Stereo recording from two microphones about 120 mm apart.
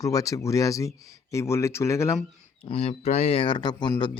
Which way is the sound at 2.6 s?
60° left (ahead or behind).